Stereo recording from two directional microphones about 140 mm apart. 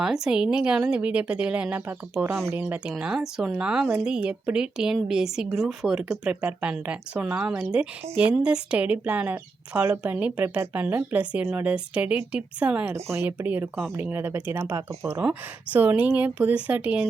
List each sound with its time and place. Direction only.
0.0 s a woman's voice: 5° right (ahead or behind)